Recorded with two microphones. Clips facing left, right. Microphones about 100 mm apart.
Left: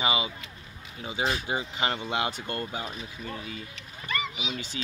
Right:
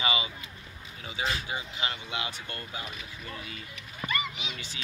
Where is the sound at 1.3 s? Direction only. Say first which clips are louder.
Left 4 dB; 50° left (ahead or behind).